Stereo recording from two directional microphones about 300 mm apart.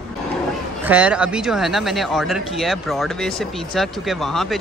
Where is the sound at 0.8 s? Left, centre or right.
Centre.